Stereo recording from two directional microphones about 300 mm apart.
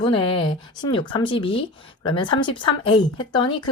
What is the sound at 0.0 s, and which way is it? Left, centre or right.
Speech, centre.